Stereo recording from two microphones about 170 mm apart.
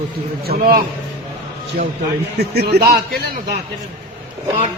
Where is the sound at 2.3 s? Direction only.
75° right (ahead or behind).